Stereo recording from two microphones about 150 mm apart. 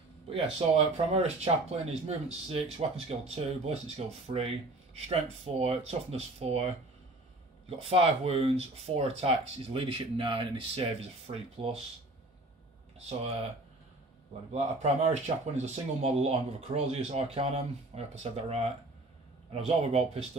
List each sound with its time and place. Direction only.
0.3 s speech: 40° right (ahead or behind)
7.8 s speech: 40° right (ahead or behind)
13.2 s speech: 45° right (ahead or behind)
14.5 s speech: 50° right (ahead or behind)